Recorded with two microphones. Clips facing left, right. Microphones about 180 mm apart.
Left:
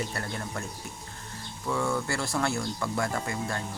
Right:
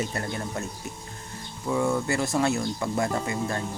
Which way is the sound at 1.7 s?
20° right (ahead or behind).